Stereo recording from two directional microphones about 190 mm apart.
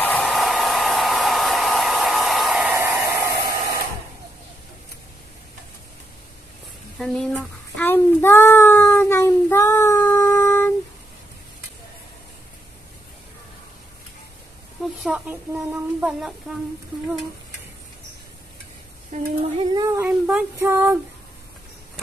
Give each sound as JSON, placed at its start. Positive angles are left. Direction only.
{"t": 0.0, "sound": "hair dryer", "side_deg": 5}
{"t": 2.7, "sound": "hair dryer", "side_deg": -15}
{"t": 7.0, "sound": "child singing", "side_deg": 0}
{"t": 15.0, "sound": "speech", "side_deg": -10}
{"t": 19.1, "sound": "a sound", "side_deg": -40}
{"t": 19.6, "sound": "speech", "side_deg": -20}
{"t": 20.1, "sound": "a sound", "side_deg": -5}